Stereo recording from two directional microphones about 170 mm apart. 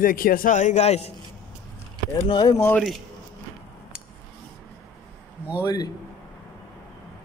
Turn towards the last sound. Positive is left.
turn(degrees=20)  # may be behind; listen again after turning